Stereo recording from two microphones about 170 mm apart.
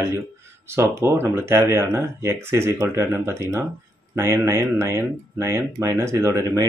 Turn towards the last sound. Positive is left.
turn(degrees=-15)  # may be behind; listen again after turning